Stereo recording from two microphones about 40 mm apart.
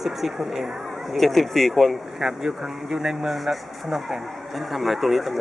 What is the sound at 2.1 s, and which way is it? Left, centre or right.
Speech, centre.